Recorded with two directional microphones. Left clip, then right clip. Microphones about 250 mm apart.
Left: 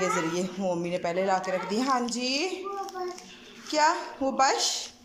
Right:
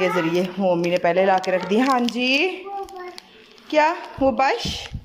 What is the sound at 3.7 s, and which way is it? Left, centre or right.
Speech, centre.